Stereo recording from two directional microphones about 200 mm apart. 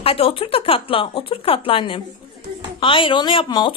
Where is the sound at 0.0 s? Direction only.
30° left (ahead or behind).